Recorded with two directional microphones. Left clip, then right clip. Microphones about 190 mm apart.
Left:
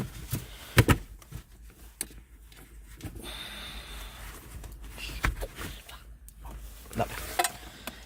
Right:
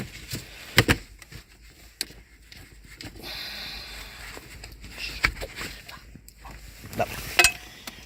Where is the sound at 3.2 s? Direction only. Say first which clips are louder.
Right 5 dB; centre (ahead or behind).